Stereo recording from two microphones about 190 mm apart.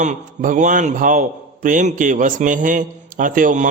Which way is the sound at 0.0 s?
40° right (ahead or behind).